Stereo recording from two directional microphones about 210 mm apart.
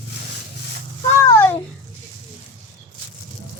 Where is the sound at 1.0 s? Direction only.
10° left (ahead or behind).